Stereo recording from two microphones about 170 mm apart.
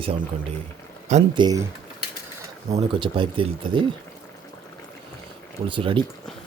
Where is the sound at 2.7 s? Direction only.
35° right (ahead or behind).